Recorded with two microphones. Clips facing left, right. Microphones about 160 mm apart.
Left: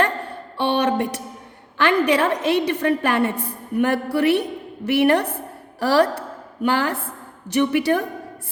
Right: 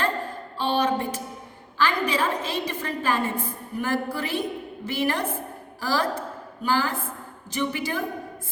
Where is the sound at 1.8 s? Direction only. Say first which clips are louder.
Left 6 dB; 70° left (ahead or behind).